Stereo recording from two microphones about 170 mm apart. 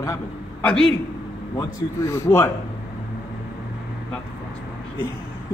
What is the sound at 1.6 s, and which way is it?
Speech, 15° left (ahead or behind).